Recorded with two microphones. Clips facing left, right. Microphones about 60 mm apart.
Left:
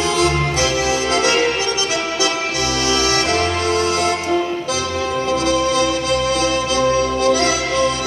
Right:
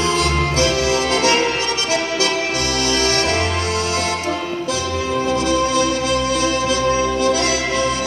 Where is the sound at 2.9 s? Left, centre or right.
Right.